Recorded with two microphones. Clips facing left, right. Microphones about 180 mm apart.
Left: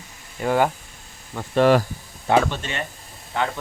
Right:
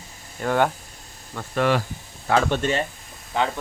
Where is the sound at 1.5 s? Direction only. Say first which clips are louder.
Left 5 dB; 40° left (ahead or behind).